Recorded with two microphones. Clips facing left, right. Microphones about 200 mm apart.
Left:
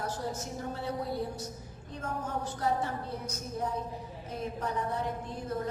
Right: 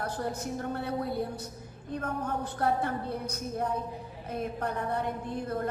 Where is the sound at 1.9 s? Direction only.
60° right (ahead or behind).